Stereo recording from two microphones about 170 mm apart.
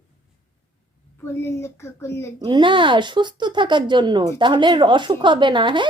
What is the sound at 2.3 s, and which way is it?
Speech, 25° right (ahead or behind).